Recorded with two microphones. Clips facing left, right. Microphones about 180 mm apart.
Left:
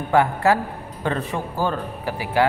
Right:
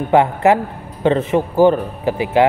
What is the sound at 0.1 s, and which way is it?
A man's voice, 20° right (ahead or behind).